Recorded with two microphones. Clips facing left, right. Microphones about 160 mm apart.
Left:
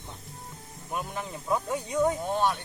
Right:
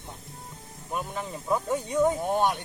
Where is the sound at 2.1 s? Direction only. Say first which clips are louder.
Right 2 dB; 15° right (ahead or behind).